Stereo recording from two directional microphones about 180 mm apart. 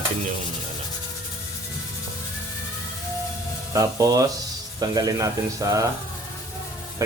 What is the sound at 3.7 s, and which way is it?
Speech, 20° right (ahead or behind).